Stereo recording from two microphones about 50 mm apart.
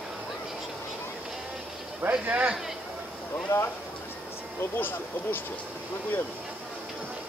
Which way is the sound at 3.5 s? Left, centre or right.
Left.